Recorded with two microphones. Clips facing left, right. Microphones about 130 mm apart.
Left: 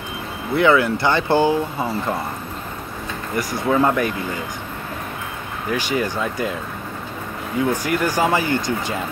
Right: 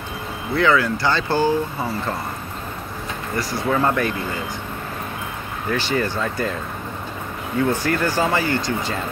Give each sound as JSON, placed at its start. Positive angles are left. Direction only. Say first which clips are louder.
{"t": 0.6, "sound": "speech", "louder": "left 2 dB", "side_deg": 20}
{"t": 3.3, "sound": "speech", "louder": "left 3 dB", "side_deg": 15}
{"t": 5.7, "sound": "speech", "louder": "even", "side_deg": 15}
{"t": 7.8, "sound": "speech", "louder": "left 1 dB", "side_deg": 15}